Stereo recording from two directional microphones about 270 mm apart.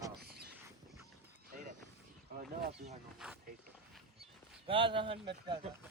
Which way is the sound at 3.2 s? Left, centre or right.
Centre.